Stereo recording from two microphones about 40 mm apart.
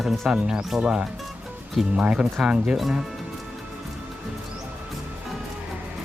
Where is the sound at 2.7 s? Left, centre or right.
Centre.